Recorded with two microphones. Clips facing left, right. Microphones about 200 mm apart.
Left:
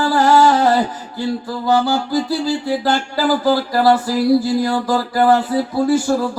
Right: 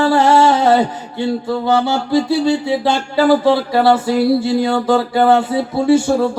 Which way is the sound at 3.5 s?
25° right (ahead or behind).